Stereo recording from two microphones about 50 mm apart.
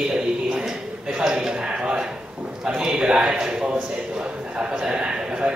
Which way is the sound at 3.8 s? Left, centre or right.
Right.